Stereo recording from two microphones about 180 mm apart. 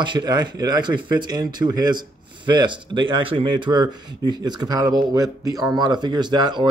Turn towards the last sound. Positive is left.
turn(degrees=-25)  # may be behind; listen again after turning